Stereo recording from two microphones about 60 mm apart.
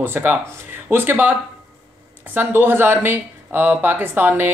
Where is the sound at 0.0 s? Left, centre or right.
Right.